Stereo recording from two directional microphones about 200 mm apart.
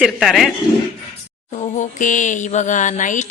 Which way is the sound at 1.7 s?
40° left (ahead or behind).